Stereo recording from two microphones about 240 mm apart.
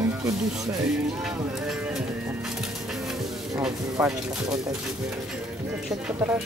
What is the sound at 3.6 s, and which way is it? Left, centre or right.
Speech, centre.